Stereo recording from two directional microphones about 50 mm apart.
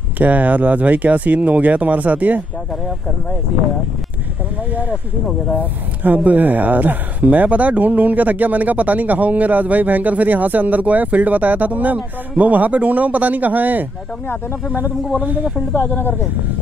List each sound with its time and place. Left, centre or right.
0.2 s speech: right
4.6 s speech: right
15.7 s speech: left